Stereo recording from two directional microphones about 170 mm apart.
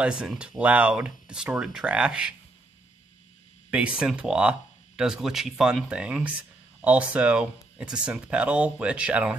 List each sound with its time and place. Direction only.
0.0 s speech: 5° right (ahead or behind)
3.7 s speech: 5° right (ahead or behind)